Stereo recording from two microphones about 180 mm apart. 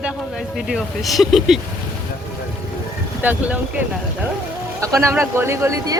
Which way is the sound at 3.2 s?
10° right (ahead or behind).